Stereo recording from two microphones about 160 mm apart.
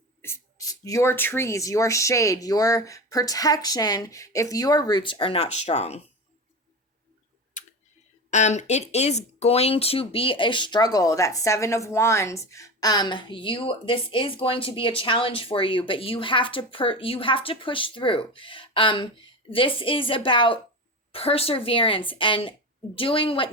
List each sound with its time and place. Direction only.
0.2 s speech: 15° left (ahead or behind); by 6.0 s 40° left (ahead or behind)
7.6 s tick: 50° left (ahead or behind)
8.3 s speech: 45° left (ahead or behind)